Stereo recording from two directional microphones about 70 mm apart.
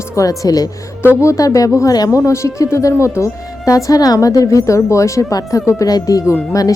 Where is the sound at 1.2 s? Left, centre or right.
Left.